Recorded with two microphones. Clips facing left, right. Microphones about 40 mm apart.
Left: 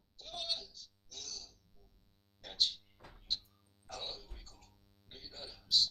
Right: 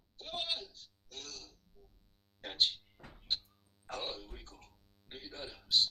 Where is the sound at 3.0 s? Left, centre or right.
Centre.